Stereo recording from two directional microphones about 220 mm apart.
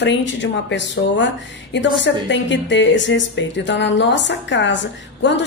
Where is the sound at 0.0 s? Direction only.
55° left (ahead or behind).